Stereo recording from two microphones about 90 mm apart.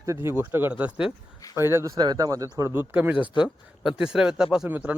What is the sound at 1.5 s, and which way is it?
Speech, 30° right (ahead or behind).